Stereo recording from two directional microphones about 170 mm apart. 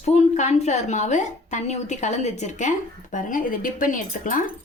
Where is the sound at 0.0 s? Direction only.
40° left (ahead or behind).